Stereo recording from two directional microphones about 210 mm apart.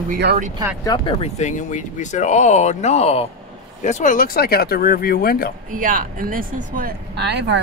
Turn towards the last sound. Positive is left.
turn(degrees=-55)  # may be behind; listen again after turning